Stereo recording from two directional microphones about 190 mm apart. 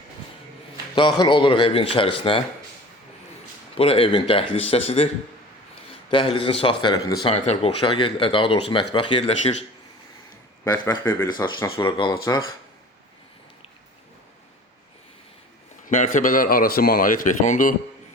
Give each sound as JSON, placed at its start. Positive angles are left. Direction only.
{"t": 0.9, "sound": "speech", "side_deg": 25}
{"t": 3.8, "sound": "speech", "side_deg": 30}
{"t": 7.3, "sound": "speech", "side_deg": 35}
{"t": 10.6, "sound": "speech", "side_deg": 20}
{"t": 15.9, "sound": "a man's voice", "side_deg": 45}